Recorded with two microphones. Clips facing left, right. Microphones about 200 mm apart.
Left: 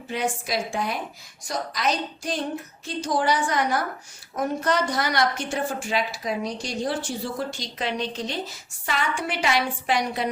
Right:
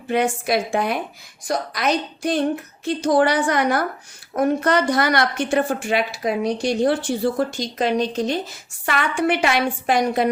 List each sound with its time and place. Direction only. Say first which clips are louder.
0.1 s a woman's voice: right 7 dB; 60° right (ahead or behind)